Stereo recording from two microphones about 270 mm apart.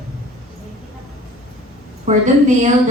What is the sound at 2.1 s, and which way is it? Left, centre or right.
Speech, right.